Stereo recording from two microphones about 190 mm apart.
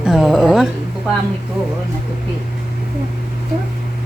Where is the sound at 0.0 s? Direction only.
5° right (ahead or behind).